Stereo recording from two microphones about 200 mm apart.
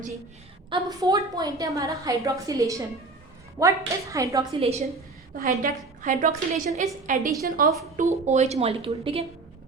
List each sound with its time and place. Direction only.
0.7 s a woman's voice: 20° right (ahead or behind)
4.6 s a woman's voice: 30° right (ahead or behind)
5.3 s a woman's voice: 45° right (ahead or behind); by 9.2 s 25° right (ahead or behind)